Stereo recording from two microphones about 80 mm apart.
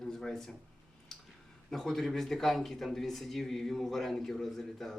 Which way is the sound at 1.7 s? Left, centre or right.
Centre.